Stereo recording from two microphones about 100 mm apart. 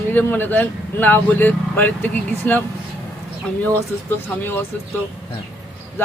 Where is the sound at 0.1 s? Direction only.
20° left (ahead or behind).